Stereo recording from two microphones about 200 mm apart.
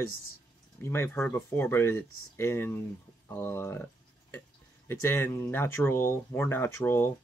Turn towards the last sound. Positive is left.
turn(degrees=10)  # may be behind; listen again after turning